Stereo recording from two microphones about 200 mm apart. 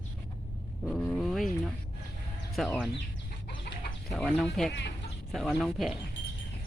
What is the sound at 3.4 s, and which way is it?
Chicken, 45° left (ahead or behind).